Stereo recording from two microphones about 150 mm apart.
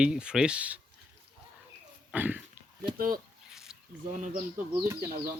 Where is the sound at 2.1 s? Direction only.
10° right (ahead or behind).